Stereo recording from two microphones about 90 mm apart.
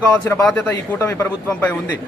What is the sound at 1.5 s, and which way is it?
Speech, 20° left (ahead or behind).